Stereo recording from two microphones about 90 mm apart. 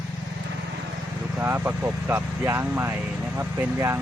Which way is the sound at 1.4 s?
25° right (ahead or behind).